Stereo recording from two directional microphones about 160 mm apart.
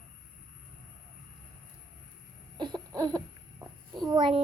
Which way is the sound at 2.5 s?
25° right (ahead or behind).